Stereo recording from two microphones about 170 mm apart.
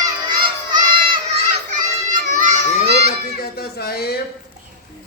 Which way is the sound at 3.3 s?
65° left (ahead or behind).